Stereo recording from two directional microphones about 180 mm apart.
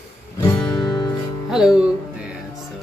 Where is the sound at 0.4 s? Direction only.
20° left (ahead or behind).